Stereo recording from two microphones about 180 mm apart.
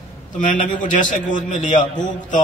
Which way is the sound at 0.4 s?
45° left (ahead or behind).